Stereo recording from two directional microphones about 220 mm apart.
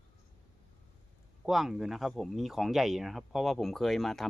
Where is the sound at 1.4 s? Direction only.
Centre (ahead or behind).